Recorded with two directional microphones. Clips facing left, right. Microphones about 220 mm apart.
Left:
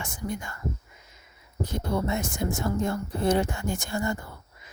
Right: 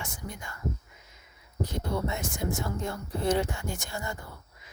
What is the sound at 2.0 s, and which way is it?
Speech, 45° left (ahead or behind).